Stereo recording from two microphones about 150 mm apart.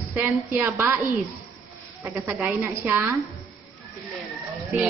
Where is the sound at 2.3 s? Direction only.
10° right (ahead or behind).